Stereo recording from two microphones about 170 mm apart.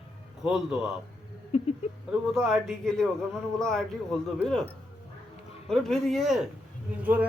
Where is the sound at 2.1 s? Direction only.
Centre (ahead or behind).